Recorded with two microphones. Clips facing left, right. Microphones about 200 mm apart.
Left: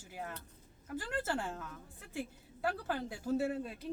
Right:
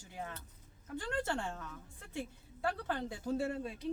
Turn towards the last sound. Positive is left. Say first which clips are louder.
# left 1 dB
turn(degrees=0)  # may be behind; listen again after turning